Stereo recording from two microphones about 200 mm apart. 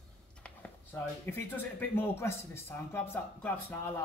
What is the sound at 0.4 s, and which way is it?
Speech, 10° left (ahead or behind).